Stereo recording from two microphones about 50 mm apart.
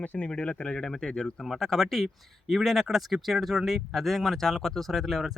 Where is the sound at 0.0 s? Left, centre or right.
Left.